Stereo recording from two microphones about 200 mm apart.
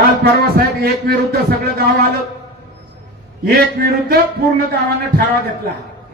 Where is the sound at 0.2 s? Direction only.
50° right (ahead or behind).